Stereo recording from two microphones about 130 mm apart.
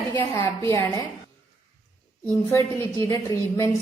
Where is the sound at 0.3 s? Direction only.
20° left (ahead or behind).